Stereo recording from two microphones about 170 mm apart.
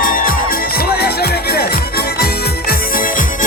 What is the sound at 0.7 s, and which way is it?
Music, 65° left (ahead or behind).